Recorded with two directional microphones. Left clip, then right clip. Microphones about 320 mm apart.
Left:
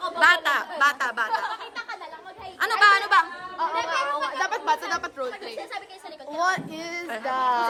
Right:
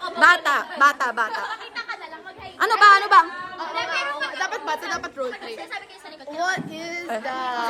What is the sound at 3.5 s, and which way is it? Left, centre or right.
Chatter, left.